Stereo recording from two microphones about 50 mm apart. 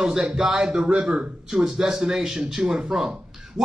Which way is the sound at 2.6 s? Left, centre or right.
Right.